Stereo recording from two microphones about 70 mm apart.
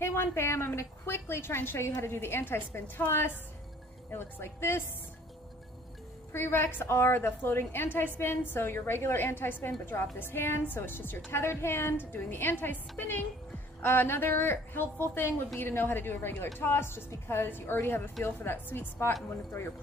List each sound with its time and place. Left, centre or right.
0.0 s a woman's voice: left
6.3 s a woman's voice: left